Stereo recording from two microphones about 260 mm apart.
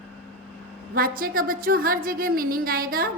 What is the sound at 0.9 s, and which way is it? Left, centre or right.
A woman's voice, right.